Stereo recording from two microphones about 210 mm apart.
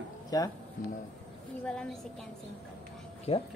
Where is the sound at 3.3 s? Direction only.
30° left (ahead or behind).